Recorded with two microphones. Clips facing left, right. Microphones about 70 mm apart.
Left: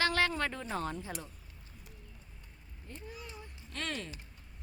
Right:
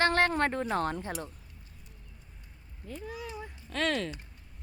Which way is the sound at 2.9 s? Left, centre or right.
Right.